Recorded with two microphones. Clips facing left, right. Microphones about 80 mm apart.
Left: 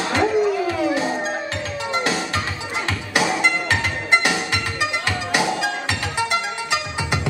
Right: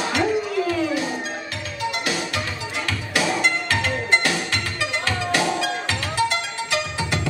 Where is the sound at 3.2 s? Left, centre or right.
Centre.